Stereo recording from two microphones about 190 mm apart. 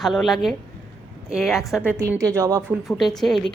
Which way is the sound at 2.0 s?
15° right (ahead or behind).